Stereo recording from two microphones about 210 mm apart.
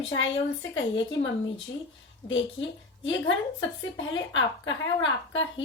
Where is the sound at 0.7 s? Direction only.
65° left (ahead or behind).